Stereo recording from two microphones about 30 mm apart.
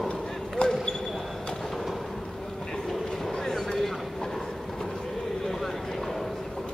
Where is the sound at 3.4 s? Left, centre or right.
Centre.